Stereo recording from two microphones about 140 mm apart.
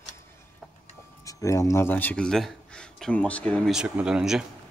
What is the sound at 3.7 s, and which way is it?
Speech, 5° right (ahead or behind).